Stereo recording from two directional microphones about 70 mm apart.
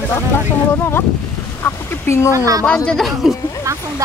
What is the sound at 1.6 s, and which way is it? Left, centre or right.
Speech, left.